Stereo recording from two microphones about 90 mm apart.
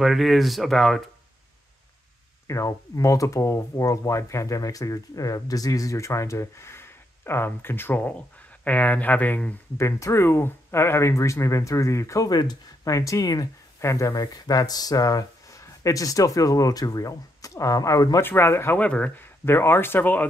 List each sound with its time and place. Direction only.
0.0 s speech: centre (ahead or behind)
2.4 s speech: 35° left (ahead or behind); by 9.6 s 15° left (ahead or behind)
9.8 s speech: 35° left (ahead or behind)
12.3 s speech: 50° left (ahead or behind)
18.2 s speech: 25° left (ahead or behind)
18.8 s speech: 15° left (ahead or behind)
19.4 s speech: 25° left (ahead or behind)